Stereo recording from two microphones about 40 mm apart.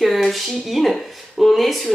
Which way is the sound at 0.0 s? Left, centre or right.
Centre.